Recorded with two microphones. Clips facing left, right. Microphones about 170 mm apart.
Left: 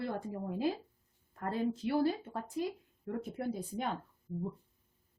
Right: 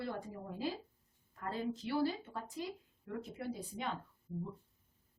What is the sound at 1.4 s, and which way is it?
A woman's voice, 50° left (ahead or behind).